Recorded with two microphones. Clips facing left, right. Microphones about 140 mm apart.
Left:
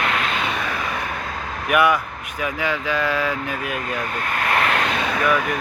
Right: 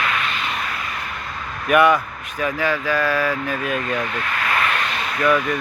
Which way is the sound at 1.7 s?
10° left (ahead or behind).